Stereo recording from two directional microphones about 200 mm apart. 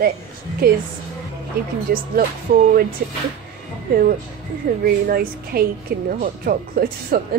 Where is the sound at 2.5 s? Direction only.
45° right (ahead or behind).